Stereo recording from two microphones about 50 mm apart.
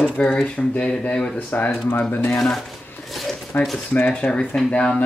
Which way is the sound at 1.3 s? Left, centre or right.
Left.